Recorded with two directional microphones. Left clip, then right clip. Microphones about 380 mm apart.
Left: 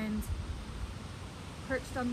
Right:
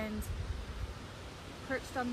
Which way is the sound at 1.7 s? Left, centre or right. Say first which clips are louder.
Left 2 dB; centre.